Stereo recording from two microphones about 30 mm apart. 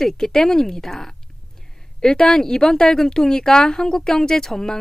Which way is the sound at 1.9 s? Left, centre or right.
Left.